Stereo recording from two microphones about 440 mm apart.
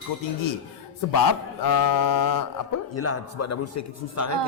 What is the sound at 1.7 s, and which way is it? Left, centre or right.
Speech, left.